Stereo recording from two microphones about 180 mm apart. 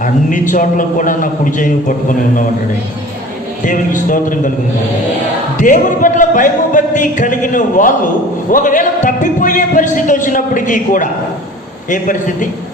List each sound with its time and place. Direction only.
0.0 s a man's voice: 45° left (ahead or behind)
3.6 s a man's voice: 45° left (ahead or behind)
5.5 s a man's voice: 45° left (ahead or behind)